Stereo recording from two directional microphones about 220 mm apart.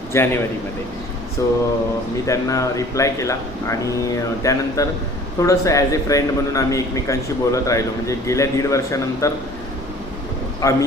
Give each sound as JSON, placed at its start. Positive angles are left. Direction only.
{"t": 0.1, "sound": "a man's voice", "side_deg": 10}
{"t": 1.4, "sound": "a man's voice", "side_deg": 15}
{"t": 10.6, "sound": "a man's voice", "side_deg": 15}